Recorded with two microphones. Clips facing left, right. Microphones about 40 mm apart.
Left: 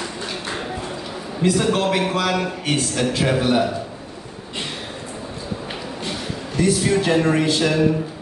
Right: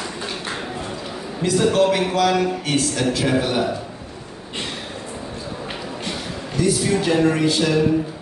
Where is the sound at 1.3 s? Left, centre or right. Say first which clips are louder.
Right 2 dB; centre.